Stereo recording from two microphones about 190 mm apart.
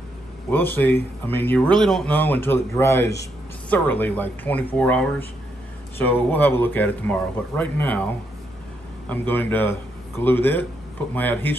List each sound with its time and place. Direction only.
0.5 s speech: 10° left (ahead or behind)
9.1 s speech: 10° left (ahead or behind)